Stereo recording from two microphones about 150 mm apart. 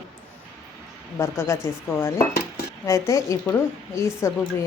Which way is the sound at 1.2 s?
15° left (ahead or behind).